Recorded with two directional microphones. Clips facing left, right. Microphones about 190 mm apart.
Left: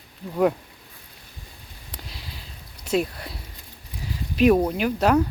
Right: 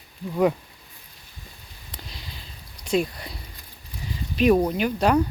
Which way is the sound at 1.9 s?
5° left (ahead or behind).